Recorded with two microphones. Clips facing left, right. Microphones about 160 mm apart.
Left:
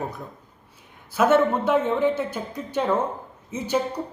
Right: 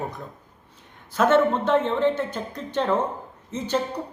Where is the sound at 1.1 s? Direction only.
10° left (ahead or behind).